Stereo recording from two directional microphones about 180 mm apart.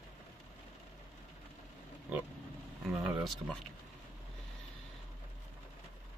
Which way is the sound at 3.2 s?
Centre (ahead or behind).